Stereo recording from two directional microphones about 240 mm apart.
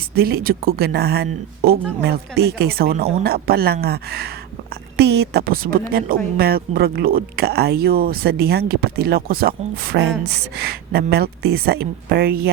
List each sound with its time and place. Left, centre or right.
0.1 s speech: right